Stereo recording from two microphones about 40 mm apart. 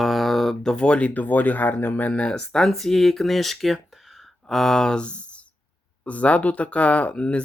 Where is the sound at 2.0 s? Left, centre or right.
Left.